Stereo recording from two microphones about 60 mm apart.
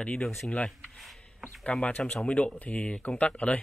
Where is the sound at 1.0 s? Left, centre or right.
Centre.